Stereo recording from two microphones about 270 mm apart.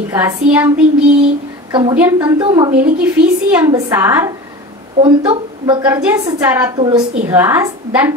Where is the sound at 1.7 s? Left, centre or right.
Centre.